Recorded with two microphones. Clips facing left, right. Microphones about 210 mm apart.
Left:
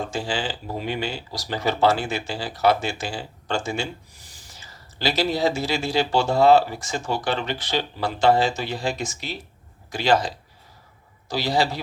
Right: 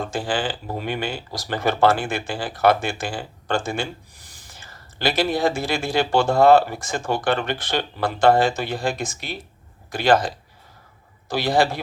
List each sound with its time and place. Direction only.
0.1 s speech: 55° right (ahead or behind)